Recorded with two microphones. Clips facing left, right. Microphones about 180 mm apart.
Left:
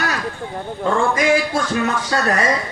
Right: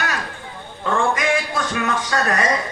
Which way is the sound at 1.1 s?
30° left (ahead or behind).